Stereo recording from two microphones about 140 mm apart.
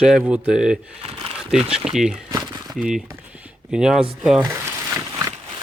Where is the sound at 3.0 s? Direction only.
10° right (ahead or behind).